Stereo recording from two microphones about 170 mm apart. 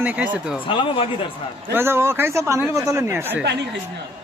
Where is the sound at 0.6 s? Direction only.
30° left (ahead or behind).